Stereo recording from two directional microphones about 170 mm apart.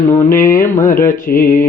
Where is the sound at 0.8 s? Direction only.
50° left (ahead or behind).